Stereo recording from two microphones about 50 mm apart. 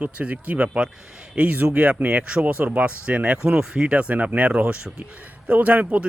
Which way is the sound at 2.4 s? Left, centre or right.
Right.